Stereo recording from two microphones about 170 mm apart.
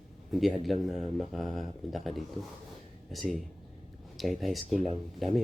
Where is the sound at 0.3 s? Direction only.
Centre (ahead or behind).